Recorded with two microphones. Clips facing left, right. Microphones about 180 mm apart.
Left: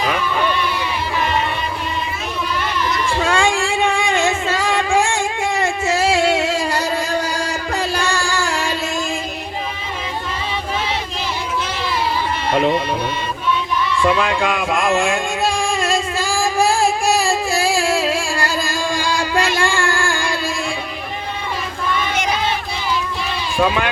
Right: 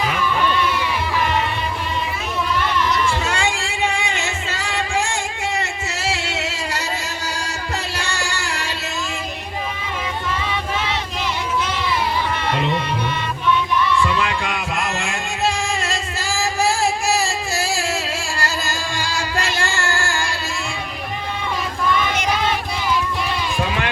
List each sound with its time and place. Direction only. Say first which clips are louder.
3.2 s a sound: left 6 dB; 55° left (ahead or behind)
7.7 s music: left 7 dB; 55° left (ahead or behind)
14.2 s music: left 4 dB; 55° left (ahead or behind)